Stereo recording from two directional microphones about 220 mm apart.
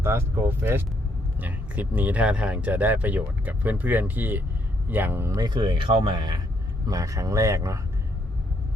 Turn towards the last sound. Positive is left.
turn(degrees=-15)  # may be behind; listen again after turning